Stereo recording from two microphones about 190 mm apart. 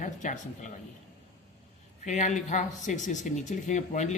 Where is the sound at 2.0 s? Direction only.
40° left (ahead or behind).